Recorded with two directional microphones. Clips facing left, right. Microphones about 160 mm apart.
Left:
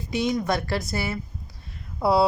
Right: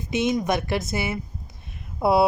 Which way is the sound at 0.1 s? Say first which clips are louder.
Right 2 dB; 20° right (ahead or behind).